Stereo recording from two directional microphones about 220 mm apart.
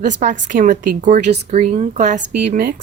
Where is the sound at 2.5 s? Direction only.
45° right (ahead or behind).